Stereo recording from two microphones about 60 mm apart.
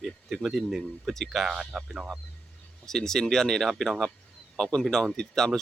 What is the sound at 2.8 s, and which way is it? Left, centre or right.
Speech, centre.